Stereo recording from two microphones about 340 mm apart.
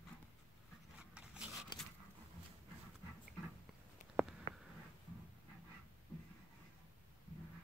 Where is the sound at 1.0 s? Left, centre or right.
Centre.